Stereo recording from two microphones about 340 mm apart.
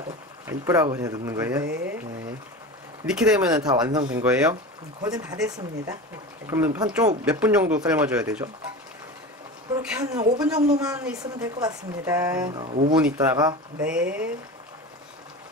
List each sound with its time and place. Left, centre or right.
0.5 s speech: centre
1.7 s speech: right
3.1 s speech: centre
9.8 s speech: centre
12.9 s speech: centre